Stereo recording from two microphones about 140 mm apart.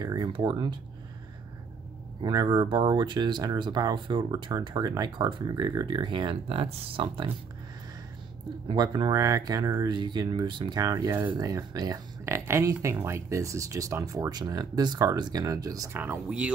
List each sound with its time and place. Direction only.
0.0 s speech: 30° right (ahead or behind)
2.2 s speech: 30° right (ahead or behind)
8.6 s speech: 30° right (ahead or behind)
16.0 s speech: 10° right (ahead or behind)